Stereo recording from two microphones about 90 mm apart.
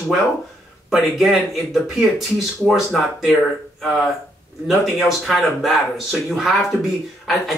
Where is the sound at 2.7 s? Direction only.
Centre (ahead or behind).